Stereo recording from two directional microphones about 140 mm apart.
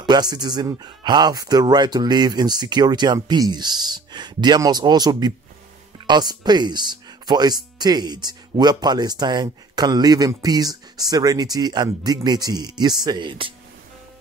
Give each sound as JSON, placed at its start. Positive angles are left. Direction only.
{"t": 0.0, "sound": "speech", "side_deg": -30}